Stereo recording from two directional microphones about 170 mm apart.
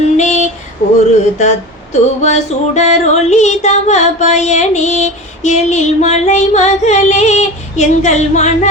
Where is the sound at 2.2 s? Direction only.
40° left (ahead or behind).